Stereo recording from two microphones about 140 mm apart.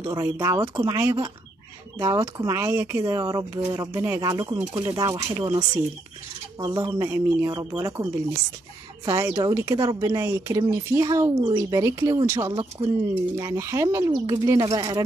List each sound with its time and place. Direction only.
0.0 s a woman's voice: 20° right (ahead or behind)
2.0 s a woman's voice: 25° right (ahead or behind)
12.8 s speech: 35° right (ahead or behind)
13.4 s a woman's voice: 25° right (ahead or behind)